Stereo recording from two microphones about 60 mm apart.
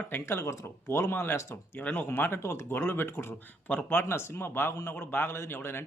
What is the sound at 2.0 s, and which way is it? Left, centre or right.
Speech, left.